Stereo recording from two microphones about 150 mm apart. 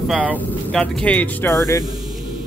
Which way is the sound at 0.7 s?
10° left (ahead or behind).